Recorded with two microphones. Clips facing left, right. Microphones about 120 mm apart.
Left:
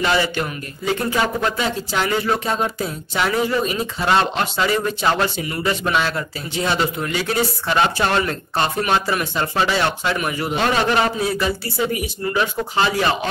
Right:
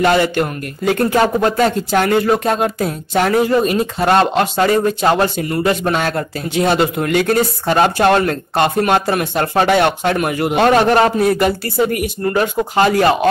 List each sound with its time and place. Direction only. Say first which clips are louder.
0.0 s speech: right 6 dB; 50° right (ahead or behind)